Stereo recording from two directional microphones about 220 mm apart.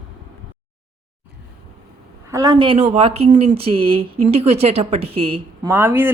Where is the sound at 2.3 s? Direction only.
15° right (ahead or behind).